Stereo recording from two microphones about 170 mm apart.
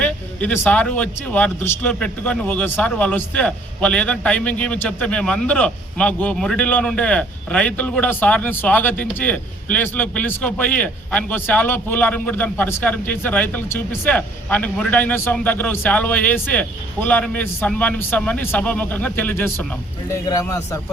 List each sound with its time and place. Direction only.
0.0 s a man's voice: 10° left (ahead or behind)